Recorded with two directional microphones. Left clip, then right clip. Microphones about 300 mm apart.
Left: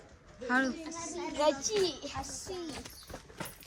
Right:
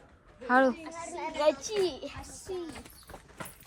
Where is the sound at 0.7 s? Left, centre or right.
Right.